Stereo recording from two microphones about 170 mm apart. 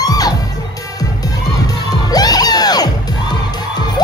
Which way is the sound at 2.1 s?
20° left (ahead or behind).